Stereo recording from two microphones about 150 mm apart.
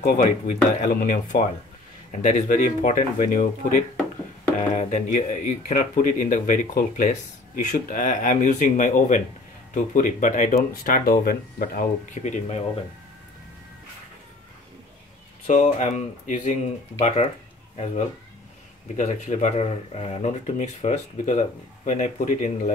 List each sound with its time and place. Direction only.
0.0 s speech: 55° left (ahead or behind)
15.4 s speech: 55° left (ahead or behind)
17.0 s speech: 45° left (ahead or behind)
18.9 s speech: 55° left (ahead or behind)